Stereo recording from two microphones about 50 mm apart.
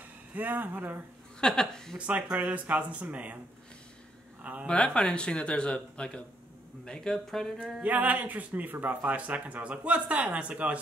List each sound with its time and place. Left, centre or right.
0.3 s speech: right
1.4 s speech: centre
2.0 s speech: right
4.4 s a man's voice: right
4.6 s speech: centre
7.8 s speech: right